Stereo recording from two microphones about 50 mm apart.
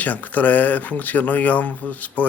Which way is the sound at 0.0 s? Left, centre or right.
Left.